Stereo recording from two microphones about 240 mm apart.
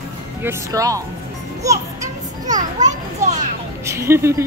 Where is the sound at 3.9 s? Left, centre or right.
Centre.